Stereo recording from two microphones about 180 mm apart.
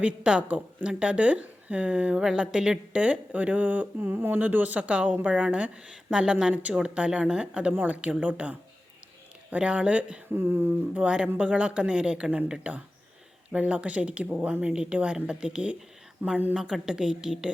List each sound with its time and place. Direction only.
0.0 s a woman's voice: 5° right (ahead or behind)